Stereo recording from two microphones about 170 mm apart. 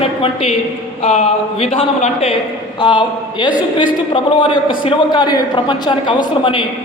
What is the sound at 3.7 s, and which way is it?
A man's voice, 30° left (ahead or behind).